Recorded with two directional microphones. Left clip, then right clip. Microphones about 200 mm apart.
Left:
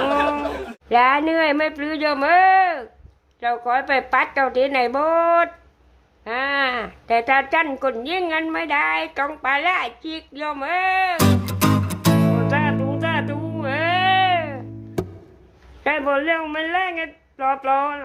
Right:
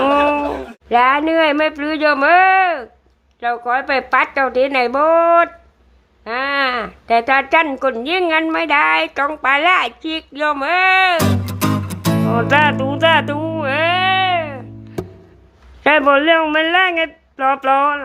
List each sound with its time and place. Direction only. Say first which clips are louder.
0.0 s speech: right 6 dB; centre (ahead or behind)
11.2 s music: right 1 dB; centre (ahead or behind)
12.5 s music: right 8 dB; 25° right (ahead or behind); by 15.0 s 5° right (ahead or behind)
15.8 s speech: right 8 dB; 20° right (ahead or behind)